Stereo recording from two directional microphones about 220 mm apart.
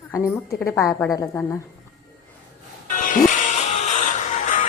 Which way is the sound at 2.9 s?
35° left (ahead or behind).